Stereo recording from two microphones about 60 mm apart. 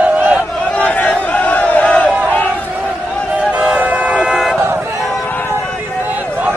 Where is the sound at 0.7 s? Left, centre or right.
Left.